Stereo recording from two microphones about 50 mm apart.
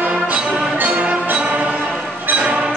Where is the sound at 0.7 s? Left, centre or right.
Right.